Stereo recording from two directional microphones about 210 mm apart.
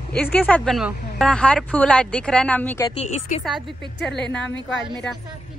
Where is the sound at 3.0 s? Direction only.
30° left (ahead or behind).